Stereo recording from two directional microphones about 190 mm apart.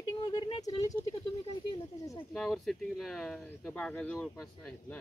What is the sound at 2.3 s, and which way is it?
Speech, centre (ahead or behind).